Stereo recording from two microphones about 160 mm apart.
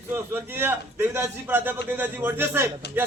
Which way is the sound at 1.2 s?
10° right (ahead or behind).